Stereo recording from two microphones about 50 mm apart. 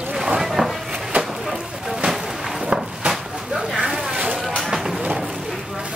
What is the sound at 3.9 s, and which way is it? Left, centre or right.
Vehicle, centre.